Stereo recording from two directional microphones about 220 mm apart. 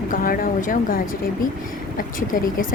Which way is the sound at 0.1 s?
40° left (ahead or behind).